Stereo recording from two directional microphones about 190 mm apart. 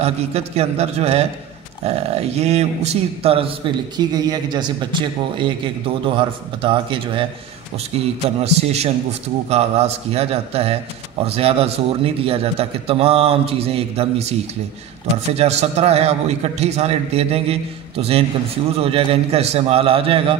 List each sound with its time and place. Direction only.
0.0 s a man's voice: 35° right (ahead or behind)
8.5 s a man's voice: 35° right (ahead or behind)
15.3 s a man's voice: 35° right (ahead or behind)